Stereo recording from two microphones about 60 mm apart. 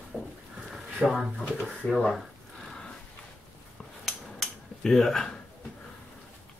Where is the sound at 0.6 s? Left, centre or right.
Centre.